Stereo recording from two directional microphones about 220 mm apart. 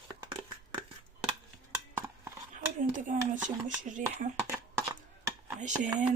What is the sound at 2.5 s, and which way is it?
Speech, 35° right (ahead or behind).